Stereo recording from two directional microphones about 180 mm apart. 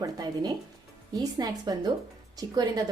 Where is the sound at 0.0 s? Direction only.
20° right (ahead or behind).